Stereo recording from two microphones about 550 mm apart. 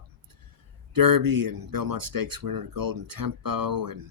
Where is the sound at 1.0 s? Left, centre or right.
Right.